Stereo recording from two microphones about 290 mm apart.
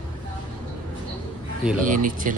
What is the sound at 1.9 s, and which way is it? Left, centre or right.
Speech, right.